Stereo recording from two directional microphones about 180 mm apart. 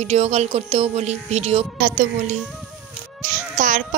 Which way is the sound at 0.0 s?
35° right (ahead or behind).